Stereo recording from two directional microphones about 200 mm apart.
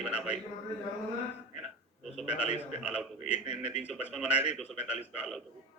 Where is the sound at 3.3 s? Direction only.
35° left (ahead or behind).